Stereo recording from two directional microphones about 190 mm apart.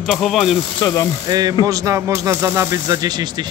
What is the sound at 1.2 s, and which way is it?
Speech, 20° right (ahead or behind).